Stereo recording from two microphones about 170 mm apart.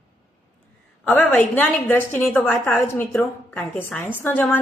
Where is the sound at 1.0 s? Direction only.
10° left (ahead or behind).